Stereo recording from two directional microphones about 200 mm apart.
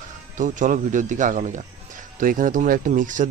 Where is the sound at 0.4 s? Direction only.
40° right (ahead or behind).